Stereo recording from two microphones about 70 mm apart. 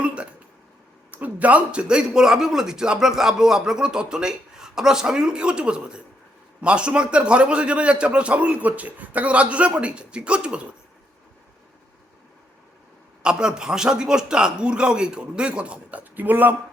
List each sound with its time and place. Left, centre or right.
0.0 s a sound: centre
1.1 s a man's voice: right
13.2 s a man's voice: centre